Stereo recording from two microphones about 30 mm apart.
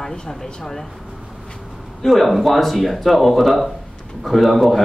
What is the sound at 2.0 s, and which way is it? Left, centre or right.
Speech, centre.